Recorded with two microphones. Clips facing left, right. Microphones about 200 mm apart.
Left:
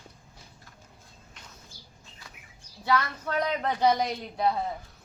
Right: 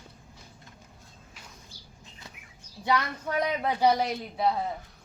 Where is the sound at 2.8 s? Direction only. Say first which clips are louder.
Even; 15° right (ahead or behind).